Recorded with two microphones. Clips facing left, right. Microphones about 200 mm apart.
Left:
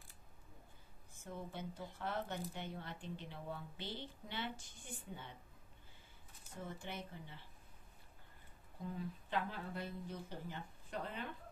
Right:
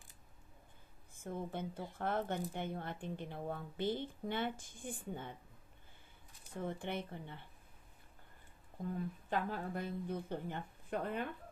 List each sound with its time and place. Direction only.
1.1 s speech: 50° right (ahead or behind)
6.6 s speech: 60° right (ahead or behind)
8.8 s speech: 50° right (ahead or behind)